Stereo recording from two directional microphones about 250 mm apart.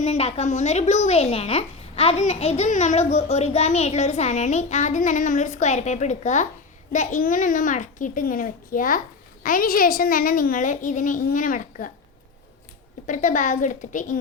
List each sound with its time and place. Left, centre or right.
0.0 s a child's voice: left
13.1 s a woman's voice: left